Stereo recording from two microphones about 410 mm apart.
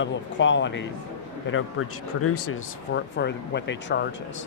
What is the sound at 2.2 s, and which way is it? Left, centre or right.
Speech, left.